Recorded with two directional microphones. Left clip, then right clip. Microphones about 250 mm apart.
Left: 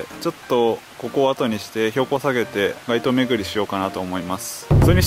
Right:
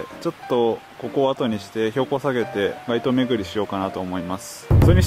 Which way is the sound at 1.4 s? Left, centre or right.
Centre.